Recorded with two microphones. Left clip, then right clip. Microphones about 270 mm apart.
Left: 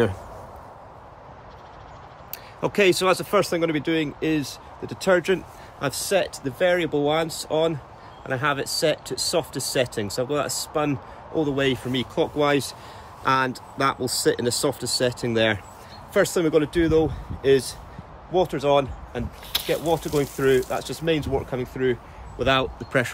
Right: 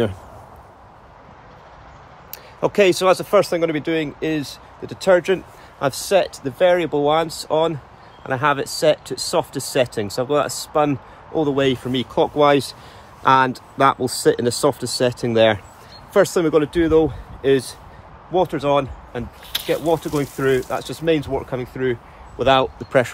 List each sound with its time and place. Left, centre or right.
2.6 s speech: centre
5.8 s speech: centre
19.5 s a sound: left
19.9 s speech: centre
22.4 s speech: centre